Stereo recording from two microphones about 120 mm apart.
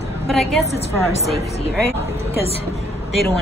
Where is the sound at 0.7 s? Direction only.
60° left (ahead or behind).